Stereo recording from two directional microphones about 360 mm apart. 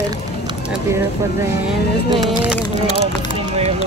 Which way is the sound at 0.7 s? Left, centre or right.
Centre.